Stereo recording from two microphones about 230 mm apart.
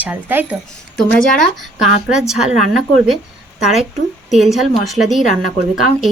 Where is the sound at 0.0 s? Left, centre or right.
Centre.